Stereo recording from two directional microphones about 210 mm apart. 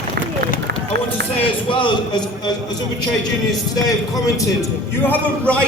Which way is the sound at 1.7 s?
25° left (ahead or behind).